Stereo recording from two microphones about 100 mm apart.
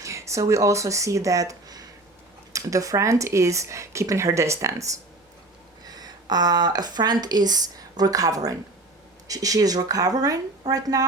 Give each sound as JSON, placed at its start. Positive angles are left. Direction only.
{"t": 0.0, "sound": "speech", "side_deg": -30}
{"t": 5.8, "sound": "speech", "side_deg": -40}